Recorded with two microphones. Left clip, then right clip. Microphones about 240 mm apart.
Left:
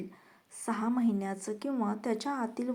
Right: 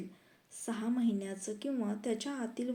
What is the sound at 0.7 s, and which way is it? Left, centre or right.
A woman's voice, centre.